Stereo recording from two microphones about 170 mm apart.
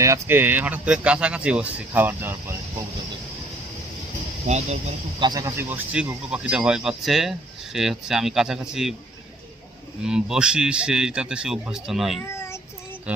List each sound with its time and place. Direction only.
0.0 s speech: 15° right (ahead or behind)
4.4 s speech: 40° right (ahead or behind)
5.2 s speech: 25° right (ahead or behind); by 9.0 s centre (ahead or behind)
10.0 s speech: 5° right (ahead or behind)
12.2 s child singing: 15° left (ahead or behind)
13.1 s speech: 10° right (ahead or behind)